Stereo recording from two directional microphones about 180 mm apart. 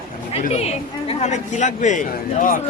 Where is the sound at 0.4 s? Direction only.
35° left (ahead or behind).